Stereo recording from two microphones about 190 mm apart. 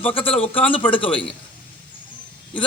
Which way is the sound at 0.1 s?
30° left (ahead or behind).